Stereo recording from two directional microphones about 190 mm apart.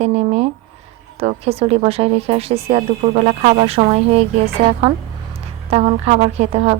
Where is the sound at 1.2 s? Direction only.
30° right (ahead or behind).